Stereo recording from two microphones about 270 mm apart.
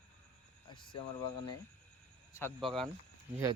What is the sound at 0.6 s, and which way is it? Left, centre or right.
Speech, centre.